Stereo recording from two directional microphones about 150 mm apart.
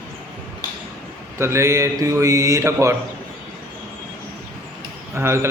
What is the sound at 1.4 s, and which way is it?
Speech, 20° right (ahead or behind).